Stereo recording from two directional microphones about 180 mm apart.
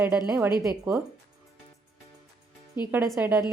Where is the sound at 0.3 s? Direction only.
15° right (ahead or behind).